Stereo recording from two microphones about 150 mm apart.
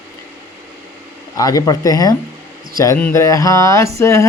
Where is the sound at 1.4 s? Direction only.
25° left (ahead or behind).